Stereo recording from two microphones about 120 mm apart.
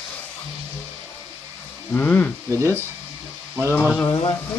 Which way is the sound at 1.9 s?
15° left (ahead or behind).